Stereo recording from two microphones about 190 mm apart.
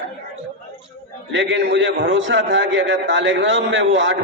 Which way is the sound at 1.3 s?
75° right (ahead or behind).